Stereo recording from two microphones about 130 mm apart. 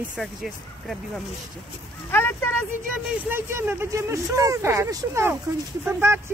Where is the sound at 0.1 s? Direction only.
Centre (ahead or behind).